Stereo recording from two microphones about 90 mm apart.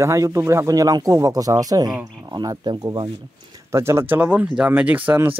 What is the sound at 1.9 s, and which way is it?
Speech, 10° right (ahead or behind).